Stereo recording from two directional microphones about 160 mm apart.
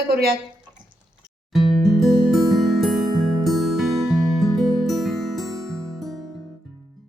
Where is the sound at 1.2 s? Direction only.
Centre (ahead or behind).